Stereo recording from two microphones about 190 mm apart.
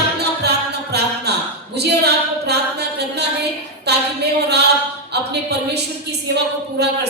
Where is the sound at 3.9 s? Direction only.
60° right (ahead or behind).